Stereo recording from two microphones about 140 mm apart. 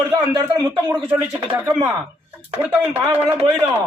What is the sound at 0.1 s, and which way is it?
A woman's voice, 20° right (ahead or behind).